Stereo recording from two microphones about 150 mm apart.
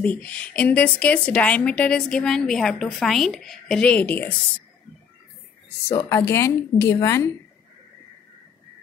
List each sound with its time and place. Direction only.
0.0 s a woman's voice: 10° left (ahead or behind)
5.9 s a woman's voice: 20° left (ahead or behind)